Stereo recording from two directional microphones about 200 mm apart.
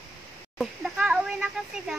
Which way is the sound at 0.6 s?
5° right (ahead or behind).